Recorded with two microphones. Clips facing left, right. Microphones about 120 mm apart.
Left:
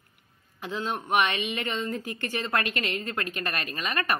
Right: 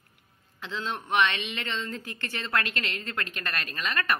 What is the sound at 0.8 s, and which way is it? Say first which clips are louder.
A woman's voice: left 1 dB; 10° left (ahead or behind).